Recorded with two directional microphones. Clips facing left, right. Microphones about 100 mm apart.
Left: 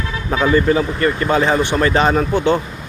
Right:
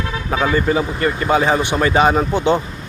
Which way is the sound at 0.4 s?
15° right (ahead or behind).